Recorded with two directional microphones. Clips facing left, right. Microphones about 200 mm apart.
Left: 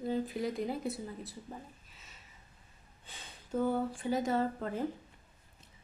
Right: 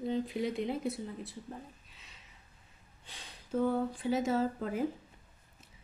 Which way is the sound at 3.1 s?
Centre (ahead or behind).